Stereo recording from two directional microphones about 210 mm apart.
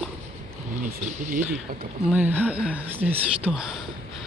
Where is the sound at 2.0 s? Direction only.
10° right (ahead or behind).